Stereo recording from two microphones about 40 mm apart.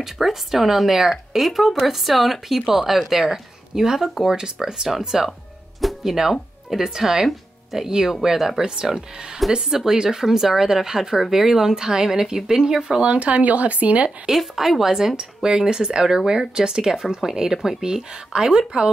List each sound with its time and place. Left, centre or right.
0.0 s a woman's voice: centre
5.8 s music: centre
6.8 s speech: centre
13.0 s speech: right
14.2 s speech: centre